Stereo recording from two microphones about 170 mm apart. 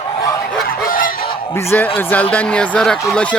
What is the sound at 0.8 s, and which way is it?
Fowl, 55° left (ahead or behind).